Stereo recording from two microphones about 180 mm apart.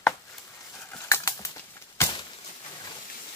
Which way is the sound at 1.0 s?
15° left (ahead or behind).